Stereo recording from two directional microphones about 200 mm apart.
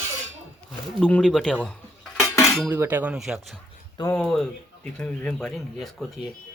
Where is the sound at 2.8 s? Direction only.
10° right (ahead or behind).